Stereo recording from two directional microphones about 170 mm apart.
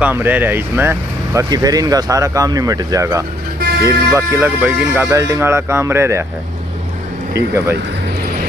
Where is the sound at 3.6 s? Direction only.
65° right (ahead or behind).